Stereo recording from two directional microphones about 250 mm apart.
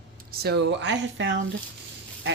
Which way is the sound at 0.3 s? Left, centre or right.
Right.